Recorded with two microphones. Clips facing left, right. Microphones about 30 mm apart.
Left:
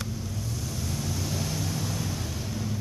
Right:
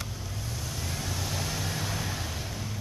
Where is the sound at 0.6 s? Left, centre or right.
Centre.